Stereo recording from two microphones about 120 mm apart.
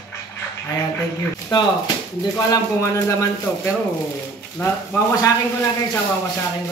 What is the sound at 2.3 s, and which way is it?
A man's voice, 30° left (ahead or behind).